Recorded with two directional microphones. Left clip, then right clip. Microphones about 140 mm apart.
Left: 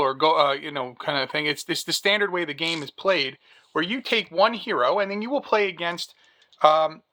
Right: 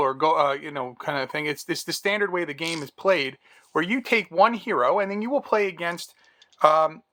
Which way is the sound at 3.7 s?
40° right (ahead or behind).